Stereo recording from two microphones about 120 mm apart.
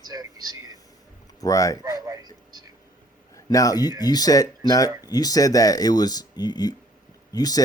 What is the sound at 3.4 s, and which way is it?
Speech, 30° left (ahead or behind).